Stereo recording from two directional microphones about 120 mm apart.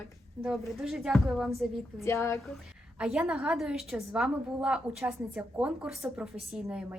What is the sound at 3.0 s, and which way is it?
A woman's voice, 5° right (ahead or behind).